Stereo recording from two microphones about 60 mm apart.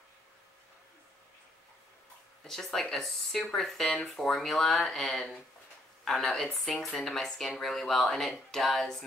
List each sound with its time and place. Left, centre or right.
2.4 s speech: centre